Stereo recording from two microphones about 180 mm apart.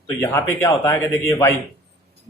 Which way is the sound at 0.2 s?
15° left (ahead or behind).